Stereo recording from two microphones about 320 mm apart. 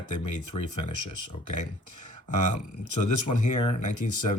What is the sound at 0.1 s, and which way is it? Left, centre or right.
Speech, left.